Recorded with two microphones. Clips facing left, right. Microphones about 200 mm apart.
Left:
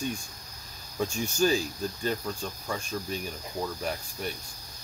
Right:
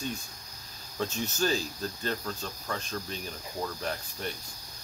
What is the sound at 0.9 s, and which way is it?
Speech, 10° left (ahead or behind).